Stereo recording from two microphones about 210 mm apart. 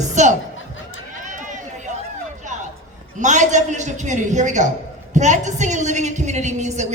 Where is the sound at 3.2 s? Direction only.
35° right (ahead or behind).